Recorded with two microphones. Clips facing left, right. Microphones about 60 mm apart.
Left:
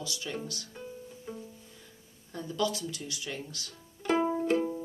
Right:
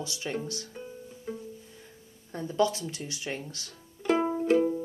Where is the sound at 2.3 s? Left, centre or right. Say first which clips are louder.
Right 5 dB; right.